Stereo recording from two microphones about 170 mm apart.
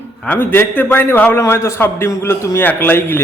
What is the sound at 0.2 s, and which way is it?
A man's voice, 10° left (ahead or behind).